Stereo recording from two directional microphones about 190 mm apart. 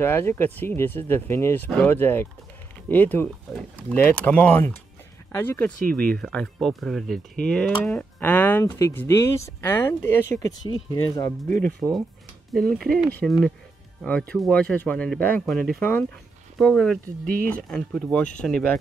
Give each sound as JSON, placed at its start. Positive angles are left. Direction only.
{"t": 0.0, "sound": "speech", "side_deg": 10}
{"t": 11.6, "sound": "speech", "side_deg": 5}